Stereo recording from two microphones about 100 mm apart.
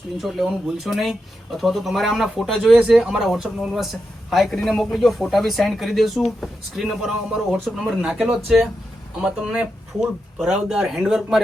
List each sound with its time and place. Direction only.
0.2 s speech: centre (ahead or behind)